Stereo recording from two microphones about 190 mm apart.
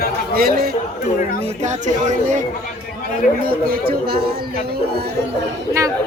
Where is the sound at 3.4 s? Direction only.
50° right (ahead or behind).